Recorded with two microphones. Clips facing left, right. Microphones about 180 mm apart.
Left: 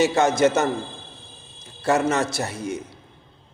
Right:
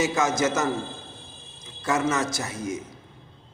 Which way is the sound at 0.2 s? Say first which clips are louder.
Left 4 dB; 60° left (ahead or behind).